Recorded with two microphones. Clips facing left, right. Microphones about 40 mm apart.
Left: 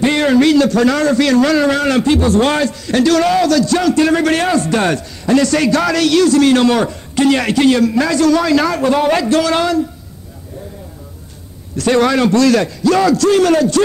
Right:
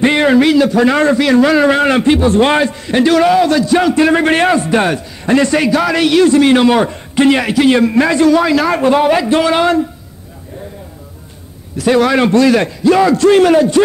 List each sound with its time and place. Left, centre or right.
0.0 s a man's voice: right
5.2 s a man's voice: right
7.4 s speech: centre
7.7 s a man's voice: right
11.7 s a man's voice: centre
12.1 s a man's voice: right